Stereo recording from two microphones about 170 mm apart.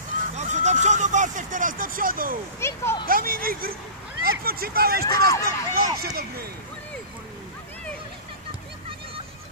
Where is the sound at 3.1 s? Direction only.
60° right (ahead or behind).